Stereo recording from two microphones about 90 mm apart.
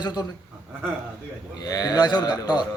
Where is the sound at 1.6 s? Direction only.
45° left (ahead or behind).